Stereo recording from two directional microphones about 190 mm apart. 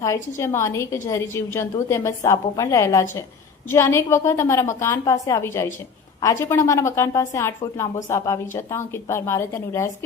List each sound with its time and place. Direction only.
0.0 s a woman's voice: 15° left (ahead or behind)